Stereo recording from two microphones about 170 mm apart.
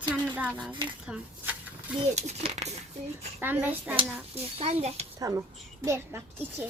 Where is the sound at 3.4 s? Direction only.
10° right (ahead or behind).